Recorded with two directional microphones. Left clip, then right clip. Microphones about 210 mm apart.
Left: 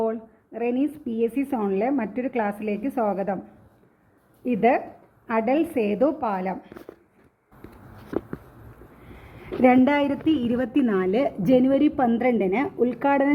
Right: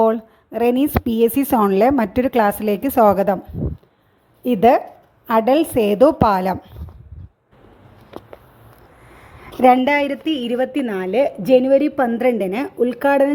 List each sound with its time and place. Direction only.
0.0 s a woman's voice: 55° right (ahead or behind)
4.4 s a woman's voice: 50° right (ahead or behind)
9.6 s a woman's voice: 15° right (ahead or behind); by 13.3 s 30° right (ahead or behind)